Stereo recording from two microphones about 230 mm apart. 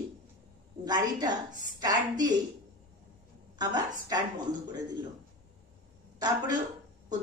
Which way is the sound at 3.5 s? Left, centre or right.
Centre.